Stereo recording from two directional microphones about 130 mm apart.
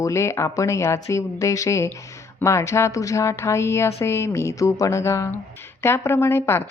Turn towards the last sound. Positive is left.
turn(degrees=20)  # may be behind; listen again after turning